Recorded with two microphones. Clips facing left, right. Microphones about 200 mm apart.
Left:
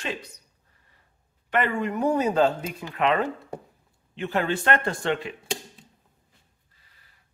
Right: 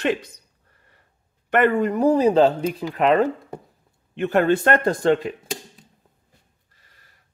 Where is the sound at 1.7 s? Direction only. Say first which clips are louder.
Right 6 dB; 35° right (ahead or behind).